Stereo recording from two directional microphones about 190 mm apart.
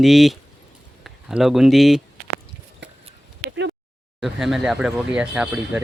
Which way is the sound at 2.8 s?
70° right (ahead or behind).